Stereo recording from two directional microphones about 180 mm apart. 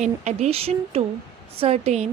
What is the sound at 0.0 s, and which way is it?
A woman's voice, 40° right (ahead or behind).